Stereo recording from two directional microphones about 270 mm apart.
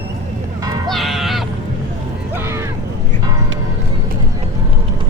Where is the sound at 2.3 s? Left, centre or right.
Centre.